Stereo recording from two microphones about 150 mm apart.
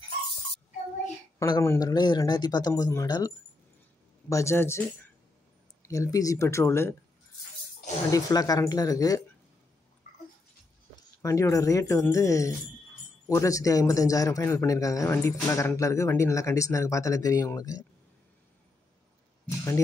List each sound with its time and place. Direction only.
1.4 s speech: 20° left (ahead or behind)
8.1 s speech: 25° left (ahead or behind)
11.2 s speech: 20° left (ahead or behind)